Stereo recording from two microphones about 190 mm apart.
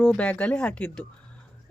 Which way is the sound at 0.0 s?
5° left (ahead or behind).